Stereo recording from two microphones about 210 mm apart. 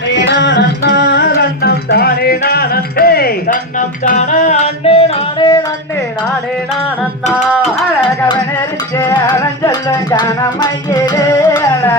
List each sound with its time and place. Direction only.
0.4 s music: 55° left (ahead or behind); by 5.5 s 25° left (ahead or behind)
7.5 s music: centre (ahead or behind)
9.0 s music: 20° left (ahead or behind)